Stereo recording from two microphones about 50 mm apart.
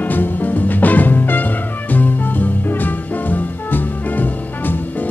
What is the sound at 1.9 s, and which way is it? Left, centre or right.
Music, left.